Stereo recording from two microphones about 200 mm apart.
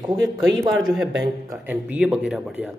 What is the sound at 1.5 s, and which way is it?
Speech, 10° right (ahead or behind).